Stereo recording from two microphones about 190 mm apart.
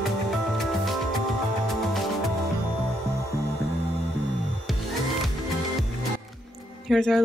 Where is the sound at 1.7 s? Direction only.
Centre (ahead or behind).